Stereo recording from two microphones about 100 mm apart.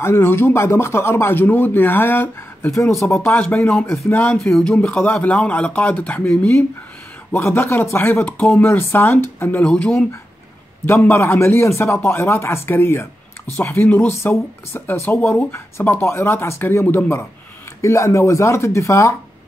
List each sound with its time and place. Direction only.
0.0 s speech: 25° left (ahead or behind)